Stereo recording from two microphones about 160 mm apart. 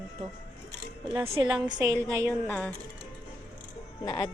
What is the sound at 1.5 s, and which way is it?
Speech, 25° right (ahead or behind).